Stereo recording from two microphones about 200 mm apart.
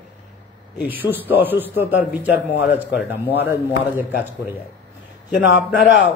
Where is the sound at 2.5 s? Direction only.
55° left (ahead or behind).